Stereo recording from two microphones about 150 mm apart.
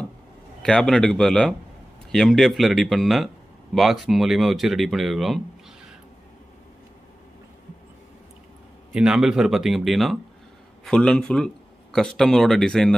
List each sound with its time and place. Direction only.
0.6 s a man's voice: 5° left (ahead or behind)
8.9 s a man's voice: 5° right (ahead or behind)